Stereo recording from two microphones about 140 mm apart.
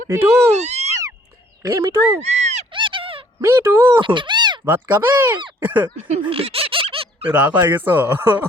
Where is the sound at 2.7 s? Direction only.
35° right (ahead or behind).